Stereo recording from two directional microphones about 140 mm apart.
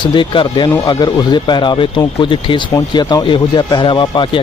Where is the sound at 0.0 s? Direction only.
35° left (ahead or behind).